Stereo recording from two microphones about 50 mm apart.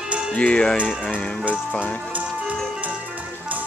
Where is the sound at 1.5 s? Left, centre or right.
Left.